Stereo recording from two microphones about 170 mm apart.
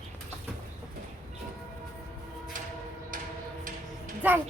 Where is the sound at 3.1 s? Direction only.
55° right (ahead or behind).